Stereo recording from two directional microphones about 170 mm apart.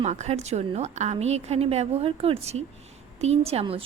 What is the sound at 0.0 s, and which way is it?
A woman's voice, 40° right (ahead or behind).